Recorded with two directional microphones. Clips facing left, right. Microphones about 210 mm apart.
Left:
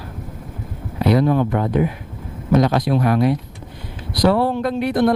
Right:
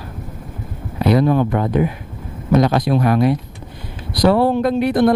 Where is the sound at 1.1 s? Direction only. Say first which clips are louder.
Right 2 dB; 20° right (ahead or behind).